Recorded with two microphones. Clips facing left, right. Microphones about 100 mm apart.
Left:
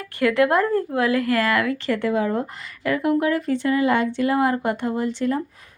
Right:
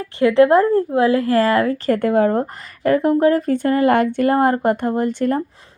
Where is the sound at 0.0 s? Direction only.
25° right (ahead or behind).